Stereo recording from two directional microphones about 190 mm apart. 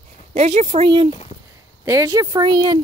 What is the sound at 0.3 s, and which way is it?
Speech, 35° right (ahead or behind).